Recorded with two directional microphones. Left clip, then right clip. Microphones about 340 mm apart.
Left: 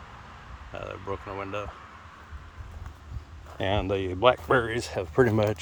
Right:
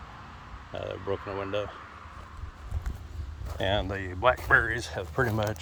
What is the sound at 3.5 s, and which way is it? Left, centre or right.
Speech, centre.